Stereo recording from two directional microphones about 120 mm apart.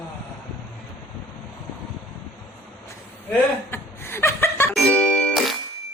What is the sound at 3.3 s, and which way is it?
Chuckle, 20° left (ahead or behind).